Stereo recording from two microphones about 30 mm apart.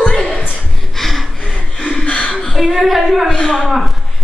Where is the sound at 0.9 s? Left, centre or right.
Centre.